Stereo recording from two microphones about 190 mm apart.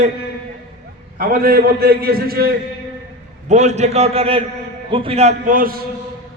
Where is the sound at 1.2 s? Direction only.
50° right (ahead or behind).